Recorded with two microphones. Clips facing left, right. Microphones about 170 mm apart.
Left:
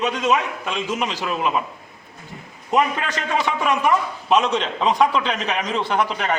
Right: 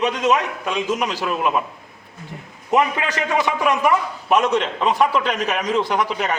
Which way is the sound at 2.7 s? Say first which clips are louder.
Right 1 dB; 10° right (ahead or behind).